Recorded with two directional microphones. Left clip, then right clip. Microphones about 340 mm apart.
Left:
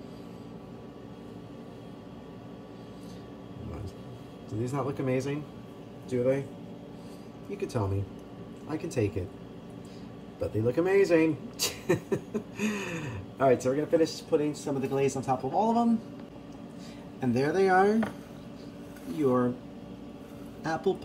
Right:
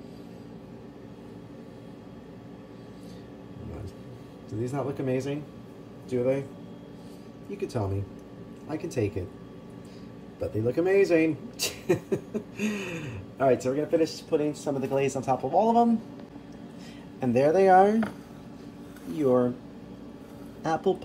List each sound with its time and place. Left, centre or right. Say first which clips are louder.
4.5 s a man's voice: right 1 dB; centre
7.4 s speech: right 1 dB; centre
10.4 s speech: right 1 dB; centre
17.2 s speech: right 5 dB; centre
20.6 s speech: right 3 dB; centre